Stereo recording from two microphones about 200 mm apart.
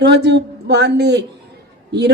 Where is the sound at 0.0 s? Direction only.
60° right (ahead or behind).